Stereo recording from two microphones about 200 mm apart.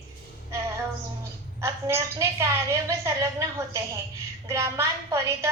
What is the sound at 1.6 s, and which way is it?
A woman's voice, 15° right (ahead or behind).